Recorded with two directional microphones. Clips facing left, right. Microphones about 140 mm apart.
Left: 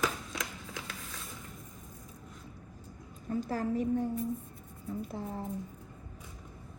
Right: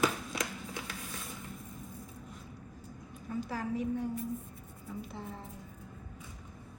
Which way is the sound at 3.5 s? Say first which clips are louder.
Left 4 dB; 45° left (ahead or behind).